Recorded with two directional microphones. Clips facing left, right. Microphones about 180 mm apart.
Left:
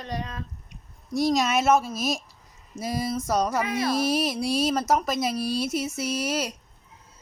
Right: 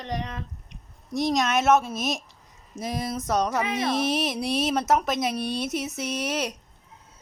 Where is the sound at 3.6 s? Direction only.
20° right (ahead or behind).